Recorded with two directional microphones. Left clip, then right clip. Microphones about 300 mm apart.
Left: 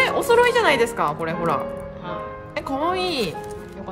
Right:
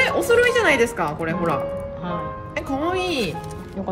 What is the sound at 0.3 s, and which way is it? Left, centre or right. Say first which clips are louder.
A woman's voice: left 1 dB; left.